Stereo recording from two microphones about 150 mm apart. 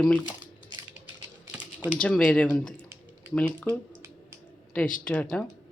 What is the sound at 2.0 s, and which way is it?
Speech, 5° left (ahead or behind).